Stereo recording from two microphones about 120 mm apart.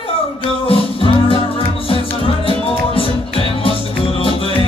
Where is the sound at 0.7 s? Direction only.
50° left (ahead or behind).